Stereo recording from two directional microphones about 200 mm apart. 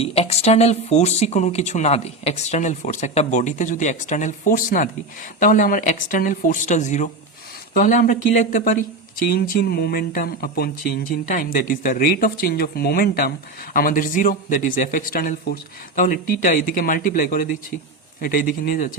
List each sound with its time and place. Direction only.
0.0 s speech: 30° left (ahead or behind)